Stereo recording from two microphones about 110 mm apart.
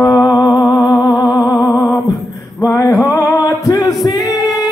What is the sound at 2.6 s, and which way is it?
Male singing, 30° left (ahead or behind).